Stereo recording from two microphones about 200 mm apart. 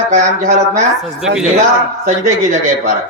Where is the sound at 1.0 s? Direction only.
Centre (ahead or behind).